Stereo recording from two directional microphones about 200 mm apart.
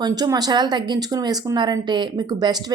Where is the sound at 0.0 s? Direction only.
20° right (ahead or behind).